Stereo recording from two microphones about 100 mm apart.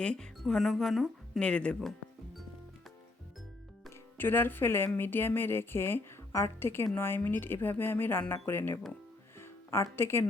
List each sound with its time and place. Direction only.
0.0 s speech: 10° left (ahead or behind)
1.4 s speech: 10° left (ahead or behind)
4.2 s speech: 20° left (ahead or behind)